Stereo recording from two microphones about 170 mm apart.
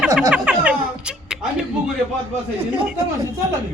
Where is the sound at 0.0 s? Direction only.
Centre (ahead or behind).